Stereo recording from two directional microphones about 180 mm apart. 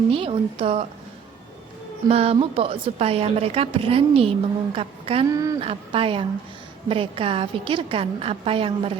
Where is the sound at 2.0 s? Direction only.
35° right (ahead or behind).